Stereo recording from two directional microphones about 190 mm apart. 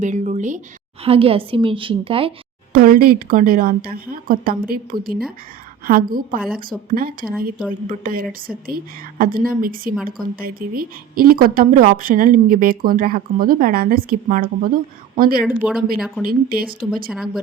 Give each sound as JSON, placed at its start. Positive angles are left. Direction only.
{"t": 0.0, "sound": "a woman's voice", "side_deg": -40}
{"t": 2.7, "sound": "speech", "side_deg": -50}
{"t": 15.4, "sound": "speech", "side_deg": -5}
{"t": 16.2, "sound": "speech", "side_deg": -50}
{"t": 17.1, "sound": "speech", "side_deg": 0}